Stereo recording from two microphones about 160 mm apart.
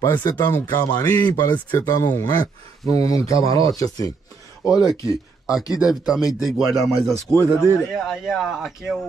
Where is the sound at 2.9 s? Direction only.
40° right (ahead or behind).